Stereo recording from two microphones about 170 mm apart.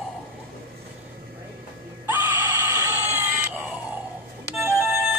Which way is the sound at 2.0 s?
10° right (ahead or behind).